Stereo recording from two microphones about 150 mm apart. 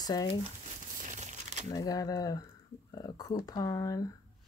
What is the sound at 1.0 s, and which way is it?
Crumpling, 55° right (ahead or behind).